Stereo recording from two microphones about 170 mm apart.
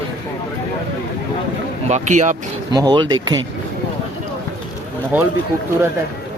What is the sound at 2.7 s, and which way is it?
Speech, 25° right (ahead or behind).